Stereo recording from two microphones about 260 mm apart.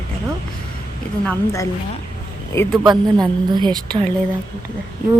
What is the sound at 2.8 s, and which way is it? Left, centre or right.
A woman's voice, centre.